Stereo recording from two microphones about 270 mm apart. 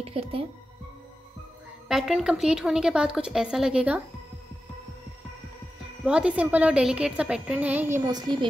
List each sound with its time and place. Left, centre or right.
0.0 s speech: right
1.9 s a woman's voice: centre
6.0 s a woman's voice: centre